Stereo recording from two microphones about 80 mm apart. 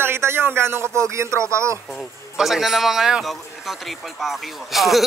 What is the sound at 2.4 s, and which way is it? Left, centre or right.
Speech, centre.